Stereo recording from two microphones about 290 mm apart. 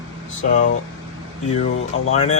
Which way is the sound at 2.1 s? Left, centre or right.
Left.